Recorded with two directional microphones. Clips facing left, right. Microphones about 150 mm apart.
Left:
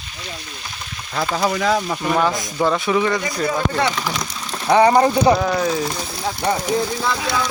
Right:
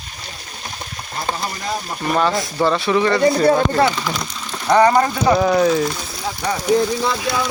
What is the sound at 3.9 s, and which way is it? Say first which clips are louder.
Speech: right 1 dB; centre (ahead or behind).